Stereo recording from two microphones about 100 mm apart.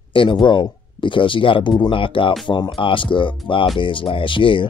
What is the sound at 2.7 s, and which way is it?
Speech, 60° left (ahead or behind).